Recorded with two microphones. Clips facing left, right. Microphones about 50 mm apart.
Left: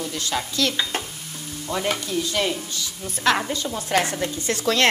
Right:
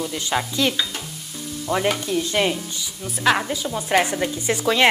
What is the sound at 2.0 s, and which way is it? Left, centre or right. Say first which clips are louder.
Stir: right 3 dB; right.